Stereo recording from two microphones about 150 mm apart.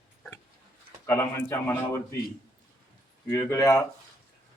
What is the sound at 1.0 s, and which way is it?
Speech, 20° left (ahead or behind).